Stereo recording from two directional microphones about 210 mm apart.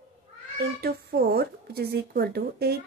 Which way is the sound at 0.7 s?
45° right (ahead or behind).